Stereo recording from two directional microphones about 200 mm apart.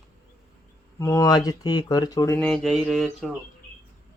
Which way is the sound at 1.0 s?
15° left (ahead or behind).